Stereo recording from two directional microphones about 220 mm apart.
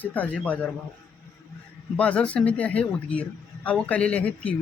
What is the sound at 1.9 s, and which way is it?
Speech, 5° left (ahead or behind).